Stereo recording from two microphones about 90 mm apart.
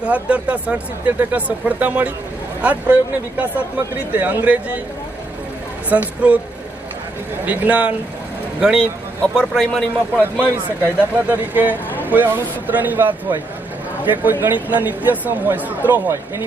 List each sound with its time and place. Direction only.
0.0 s speech: 15° right (ahead or behind)
5.9 s speech: 20° right (ahead or behind)
7.4 s speech: 15° right (ahead or behind)
9.2 s a man's voice: 10° left (ahead or behind)
11.2 s speech: 20° right (ahead or behind)